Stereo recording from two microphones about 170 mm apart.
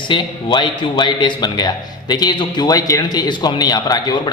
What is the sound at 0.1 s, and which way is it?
A man's voice, 25° left (ahead or behind).